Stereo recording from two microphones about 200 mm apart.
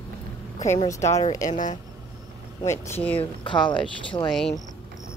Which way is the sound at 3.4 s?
25° left (ahead or behind).